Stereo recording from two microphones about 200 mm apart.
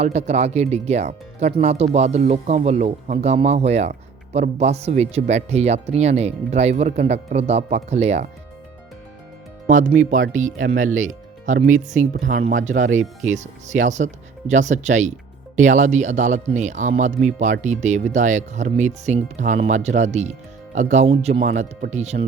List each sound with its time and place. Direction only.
0.0 s speech: 35° right (ahead or behind)
9.6 s speech: 40° right (ahead or behind)